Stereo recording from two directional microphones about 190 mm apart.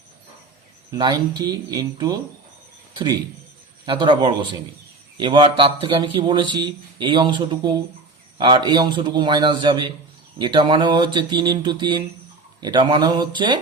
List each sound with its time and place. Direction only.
0.9 s a man's voice: 20° right (ahead or behind)